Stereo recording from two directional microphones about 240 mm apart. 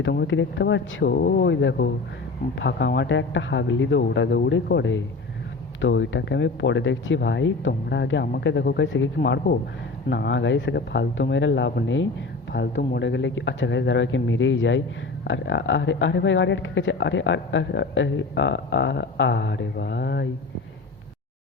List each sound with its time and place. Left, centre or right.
0.0 s speech: left